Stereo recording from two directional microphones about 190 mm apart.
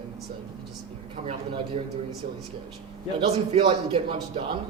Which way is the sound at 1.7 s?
30° right (ahead or behind).